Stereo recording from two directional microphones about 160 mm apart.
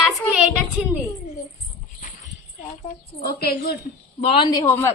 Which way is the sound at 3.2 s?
75° left (ahead or behind).